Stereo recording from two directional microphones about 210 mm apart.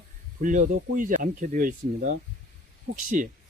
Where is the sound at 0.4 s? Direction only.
35° right (ahead or behind).